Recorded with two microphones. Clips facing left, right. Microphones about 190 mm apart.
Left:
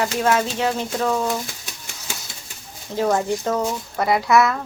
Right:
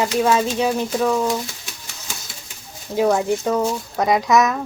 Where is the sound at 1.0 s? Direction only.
Centre (ahead or behind).